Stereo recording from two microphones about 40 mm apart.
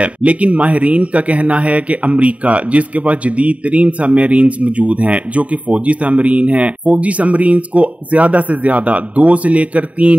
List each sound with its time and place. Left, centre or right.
0.0 s a man's voice: right